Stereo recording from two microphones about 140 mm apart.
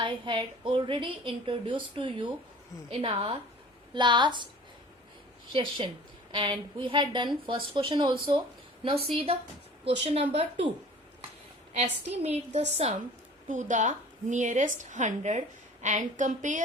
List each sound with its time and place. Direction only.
0.0 s a woman's voice: 35° right (ahead or behind)
5.5 s a woman's voice: 40° right (ahead or behind)
11.7 s a woman's voice: 50° right (ahead or behind)
13.5 s a woman's voice: 60° right (ahead or behind)